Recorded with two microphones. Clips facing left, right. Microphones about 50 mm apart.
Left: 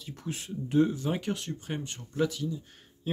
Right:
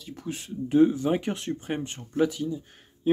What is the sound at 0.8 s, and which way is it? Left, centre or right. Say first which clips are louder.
Speech: right 5 dB; centre.